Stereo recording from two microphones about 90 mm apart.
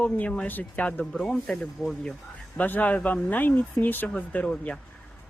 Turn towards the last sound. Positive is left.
turn(degrees=15)  # may be behind; listen again after turning